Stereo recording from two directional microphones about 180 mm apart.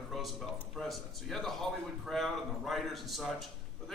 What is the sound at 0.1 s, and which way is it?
A man's voice, centre (ahead or behind).